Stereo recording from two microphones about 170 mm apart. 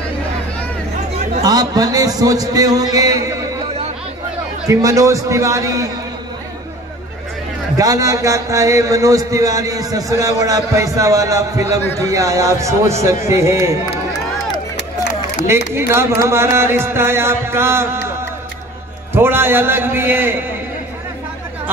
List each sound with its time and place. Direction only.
1.4 s speech: 20° right (ahead or behind)
4.6 s speech: 20° right (ahead or behind)
7.7 s speech: 20° right (ahead or behind)
15.4 s speech: 15° right (ahead or behind)
19.1 s speech: 15° right (ahead or behind)